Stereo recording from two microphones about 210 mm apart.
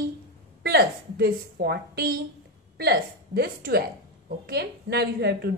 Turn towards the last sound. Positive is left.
turn(degrees=-50)  # may be behind; listen again after turning